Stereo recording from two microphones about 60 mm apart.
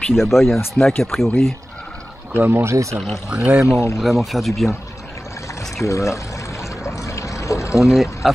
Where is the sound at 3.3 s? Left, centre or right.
Right.